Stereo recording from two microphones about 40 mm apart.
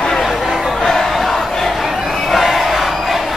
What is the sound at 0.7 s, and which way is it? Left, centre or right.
Crowd, centre.